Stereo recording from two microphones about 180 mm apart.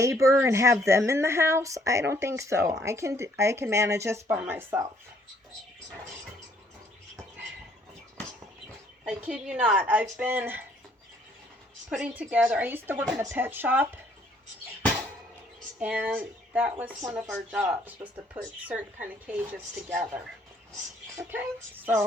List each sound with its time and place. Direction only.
0.0 s speech: 15° right (ahead or behind)
9.0 s speech: 5° right (ahead or behind)
11.9 s speech: 5° right (ahead or behind)
15.8 s speech: 10° right (ahead or behind)